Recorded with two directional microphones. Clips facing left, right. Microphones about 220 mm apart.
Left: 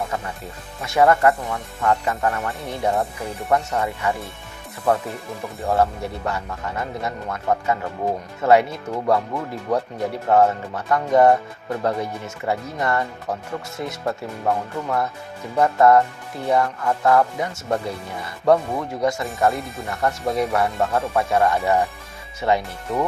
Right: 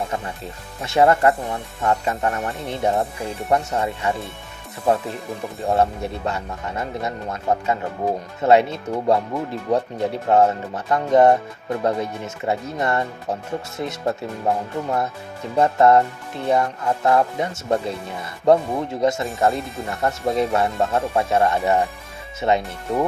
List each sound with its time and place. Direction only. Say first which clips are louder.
0.8 s speech: even; 25° right (ahead or behind)
5.7 s speech: even; 25° right (ahead or behind)